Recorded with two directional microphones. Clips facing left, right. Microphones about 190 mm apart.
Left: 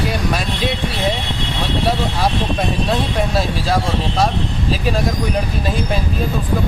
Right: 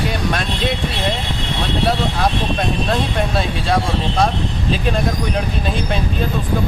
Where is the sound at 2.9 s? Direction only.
Centre (ahead or behind).